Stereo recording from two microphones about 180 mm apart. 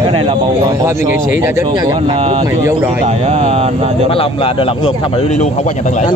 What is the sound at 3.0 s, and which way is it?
Speech, 35° right (ahead or behind).